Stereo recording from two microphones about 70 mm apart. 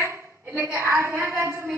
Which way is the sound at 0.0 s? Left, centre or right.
Right.